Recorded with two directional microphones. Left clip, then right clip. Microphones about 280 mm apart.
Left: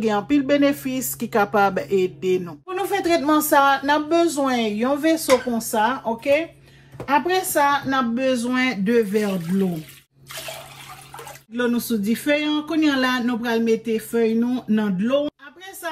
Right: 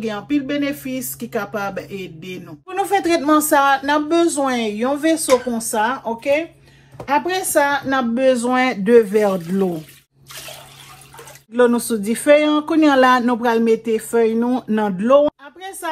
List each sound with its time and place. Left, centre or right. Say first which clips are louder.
0.0 s speech: left 2 dB; centre
2.7 s speech: right 3 dB; right
11.5 s speech: right 8 dB; right